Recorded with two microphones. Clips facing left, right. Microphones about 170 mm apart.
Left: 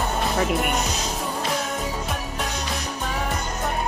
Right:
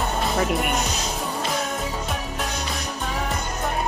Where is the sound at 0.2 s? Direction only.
Centre (ahead or behind).